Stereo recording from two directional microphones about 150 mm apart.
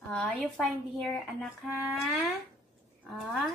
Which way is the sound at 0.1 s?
5° left (ahead or behind).